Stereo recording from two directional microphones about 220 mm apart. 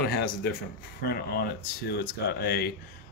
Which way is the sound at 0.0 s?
45° left (ahead or behind).